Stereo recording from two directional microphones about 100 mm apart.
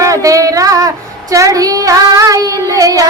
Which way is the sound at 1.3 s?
35° right (ahead or behind).